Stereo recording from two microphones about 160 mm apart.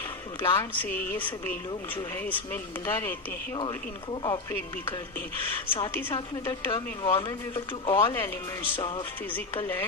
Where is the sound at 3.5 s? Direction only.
30° left (ahead or behind).